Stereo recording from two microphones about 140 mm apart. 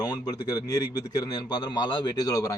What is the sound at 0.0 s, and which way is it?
A man's voice, 30° left (ahead or behind).